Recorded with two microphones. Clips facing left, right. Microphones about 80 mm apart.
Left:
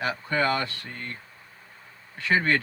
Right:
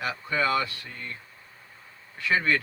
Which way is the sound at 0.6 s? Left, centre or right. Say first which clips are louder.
Left 2 dB; left.